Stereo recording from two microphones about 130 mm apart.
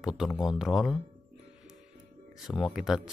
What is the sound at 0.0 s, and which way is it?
Speech, 5° right (ahead or behind).